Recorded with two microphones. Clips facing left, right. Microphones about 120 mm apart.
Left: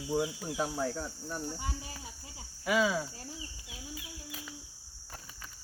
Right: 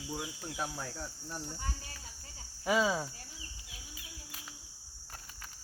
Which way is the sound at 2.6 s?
30° right (ahead or behind).